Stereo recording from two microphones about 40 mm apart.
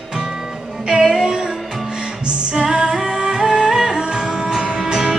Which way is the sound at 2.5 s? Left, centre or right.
Centre.